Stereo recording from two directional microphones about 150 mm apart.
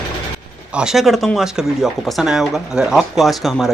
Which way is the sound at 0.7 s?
Centre (ahead or behind).